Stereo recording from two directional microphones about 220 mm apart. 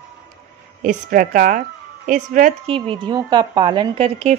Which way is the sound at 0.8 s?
35° right (ahead or behind).